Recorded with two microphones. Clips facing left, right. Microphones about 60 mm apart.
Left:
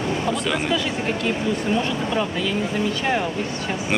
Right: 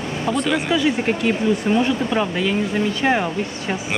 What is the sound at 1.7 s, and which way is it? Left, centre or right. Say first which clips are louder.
Speech: right 4 dB; right.